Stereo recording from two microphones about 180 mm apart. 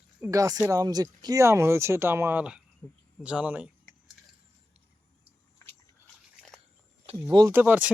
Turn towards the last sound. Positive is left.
turn(degrees=-10)  # may be behind; listen again after turning